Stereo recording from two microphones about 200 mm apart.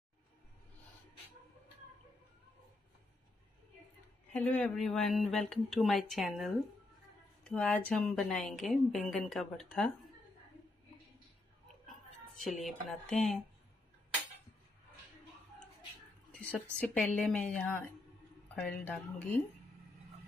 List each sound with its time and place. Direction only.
4.3 s a woman's voice: 5° left (ahead or behind)
12.4 s a woman's voice: centre (ahead or behind)
16.3 s a sound: 5° left (ahead or behind)
16.8 s a woman's voice: 5° left (ahead or behind)